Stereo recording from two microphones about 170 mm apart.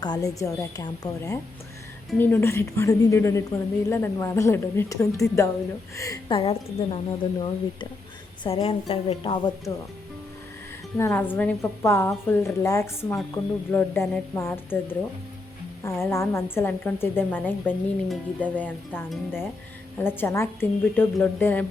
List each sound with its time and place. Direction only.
0.0 s a woman's voice: 25° left (ahead or behind)
6.3 s a woman's voice: 35° left (ahead or behind)
10.9 s a woman's voice: 15° left (ahead or behind)
18.1 s speech: 10° right (ahead or behind)
20.0 s a woman's voice: 10° left (ahead or behind)